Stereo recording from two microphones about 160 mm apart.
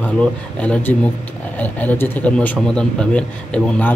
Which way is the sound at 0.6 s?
10° left (ahead or behind).